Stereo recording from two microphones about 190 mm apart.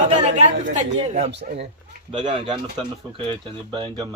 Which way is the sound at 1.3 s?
65° right (ahead or behind).